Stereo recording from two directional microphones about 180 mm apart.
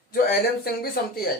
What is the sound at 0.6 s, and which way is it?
Speech, 60° left (ahead or behind).